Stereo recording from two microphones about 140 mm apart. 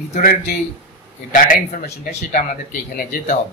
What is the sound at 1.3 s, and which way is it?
Speech, 70° left (ahead or behind).